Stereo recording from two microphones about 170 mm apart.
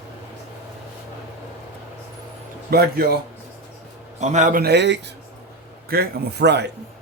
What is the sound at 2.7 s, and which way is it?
Speech, 65° right (ahead or behind).